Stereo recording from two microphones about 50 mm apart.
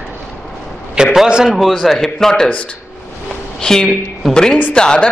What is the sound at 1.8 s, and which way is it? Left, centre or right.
Speech, centre.